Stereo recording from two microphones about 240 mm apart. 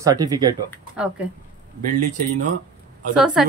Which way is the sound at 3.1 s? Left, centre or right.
Centre.